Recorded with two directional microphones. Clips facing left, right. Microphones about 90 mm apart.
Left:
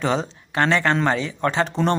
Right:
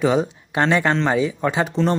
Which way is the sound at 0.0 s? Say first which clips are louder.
Right 4 dB; 10° right (ahead or behind).